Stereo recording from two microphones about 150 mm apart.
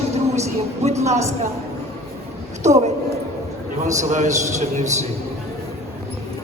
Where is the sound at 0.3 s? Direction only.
50° right (ahead or behind).